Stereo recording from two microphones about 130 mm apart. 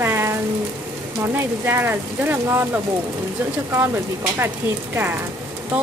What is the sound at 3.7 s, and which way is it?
Speech, 20° right (ahead or behind).